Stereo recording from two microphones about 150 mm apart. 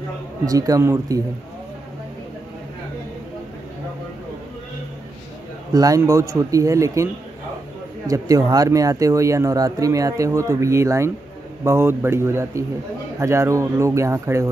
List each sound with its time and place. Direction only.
0.5 s speech: 25° right (ahead or behind)
5.7 s speech: 25° right (ahead or behind)
8.1 s speech: 25° right (ahead or behind)